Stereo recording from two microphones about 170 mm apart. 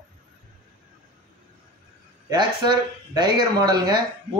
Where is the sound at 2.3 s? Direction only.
25° right (ahead or behind).